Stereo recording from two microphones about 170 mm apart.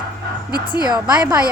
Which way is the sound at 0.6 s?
25° left (ahead or behind).